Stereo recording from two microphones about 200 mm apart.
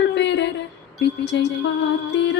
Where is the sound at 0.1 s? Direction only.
60° left (ahead or behind).